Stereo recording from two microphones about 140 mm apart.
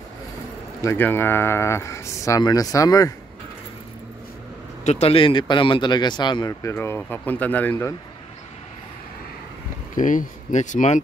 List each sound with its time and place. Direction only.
0.8 s speech: 15° left (ahead or behind)
4.8 s speech: 50° left (ahead or behind); by 6.5 s 30° left (ahead or behind)
6.6 s speech: 20° left (ahead or behind)
9.9 s speech: 65° left (ahead or behind)